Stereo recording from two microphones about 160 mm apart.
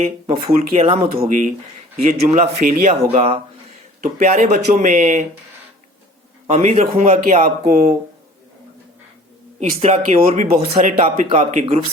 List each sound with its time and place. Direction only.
0.3 s speech: 40° right (ahead or behind)
2.0 s a man's voice: 60° right (ahead or behind)
3.1 s speech: 40° right (ahead or behind)
4.0 s speech: 55° right (ahead or behind)
6.5 s speech: 45° right (ahead or behind)
7.6 s speech: 70° right (ahead or behind)
9.6 s speech: 45° right (ahead or behind)